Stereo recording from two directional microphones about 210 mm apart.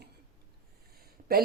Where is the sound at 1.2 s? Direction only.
30° right (ahead or behind).